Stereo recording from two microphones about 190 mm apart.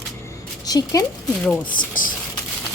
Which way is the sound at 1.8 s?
45° left (ahead or behind).